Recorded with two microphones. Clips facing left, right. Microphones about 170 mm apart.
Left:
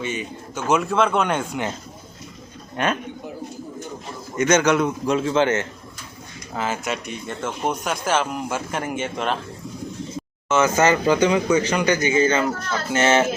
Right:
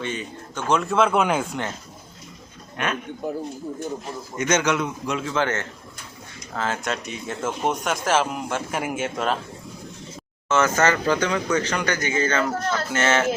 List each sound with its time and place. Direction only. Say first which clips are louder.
0.0 s speech: left 2 dB; 10° left (ahead or behind)
2.8 s a man's voice: left 4 dB; 35° left (ahead or behind)
4.4 s a man's voice: left 4 dB; 45° left (ahead or behind); by 5.6 s 20° left (ahead or behind)
6.5 s speech: left 1 dB; 10° left (ahead or behind)
10.5 s speech: left 2 dB; 15° left (ahead or behind)